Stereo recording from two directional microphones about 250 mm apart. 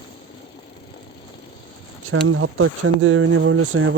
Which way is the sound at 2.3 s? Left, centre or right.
Right.